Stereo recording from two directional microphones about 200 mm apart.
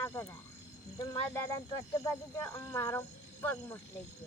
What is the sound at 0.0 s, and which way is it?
Speech, 15° left (ahead or behind).